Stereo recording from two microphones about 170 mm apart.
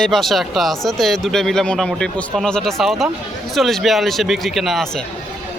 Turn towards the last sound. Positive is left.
turn(degrees=0)  # may be behind; listen again after turning